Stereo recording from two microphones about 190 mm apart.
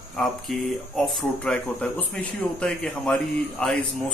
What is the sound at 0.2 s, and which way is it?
Speech, centre (ahead or behind).